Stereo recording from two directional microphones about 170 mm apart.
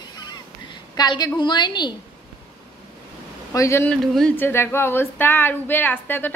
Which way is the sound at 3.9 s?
5° left (ahead or behind).